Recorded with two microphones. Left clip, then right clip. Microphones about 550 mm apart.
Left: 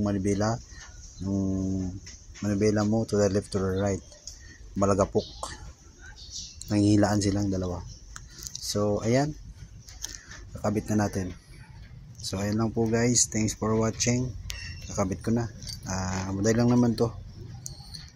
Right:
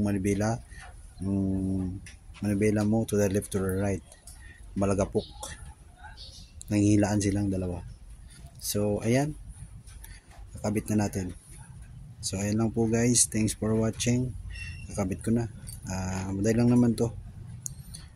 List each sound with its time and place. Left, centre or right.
0.0 s speech: right
2.4 s speech: right
6.7 s speech: right
10.6 s speech: right